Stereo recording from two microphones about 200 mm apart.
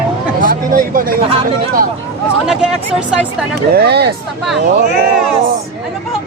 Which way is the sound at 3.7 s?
55° right (ahead or behind).